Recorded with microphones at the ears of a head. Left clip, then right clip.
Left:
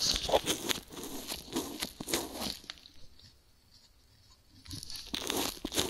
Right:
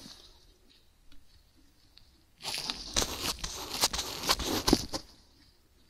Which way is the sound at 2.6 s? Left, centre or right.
Right.